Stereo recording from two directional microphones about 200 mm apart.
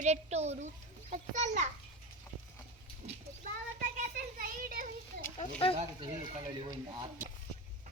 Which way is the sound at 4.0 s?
45° right (ahead or behind).